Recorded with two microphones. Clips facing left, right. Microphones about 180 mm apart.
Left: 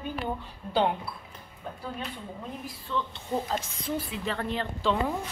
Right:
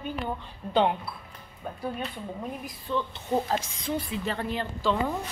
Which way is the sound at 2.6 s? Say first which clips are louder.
Right 2 dB; 15° right (ahead or behind).